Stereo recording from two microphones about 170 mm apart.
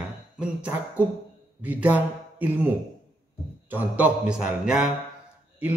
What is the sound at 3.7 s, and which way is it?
Speech, 10° right (ahead or behind).